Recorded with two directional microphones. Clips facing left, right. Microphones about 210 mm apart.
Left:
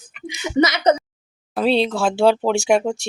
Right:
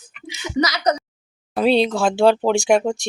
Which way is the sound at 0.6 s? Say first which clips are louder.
Left 4 dB; 25° left (ahead or behind).